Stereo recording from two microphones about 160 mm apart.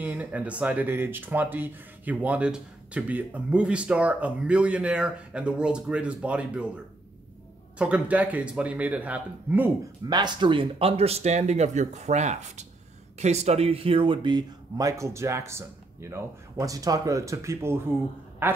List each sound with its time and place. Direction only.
0.0 s speech: 10° right (ahead or behind)
7.8 s speech: 10° right (ahead or behind)
10.0 s speech: 25° right (ahead or behind)
18.4 s quack: 15° right (ahead or behind)